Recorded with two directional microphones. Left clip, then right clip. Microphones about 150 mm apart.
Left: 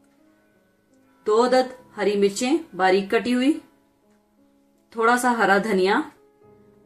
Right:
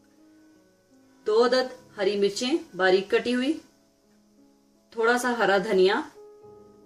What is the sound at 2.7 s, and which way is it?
Speech, 85° left.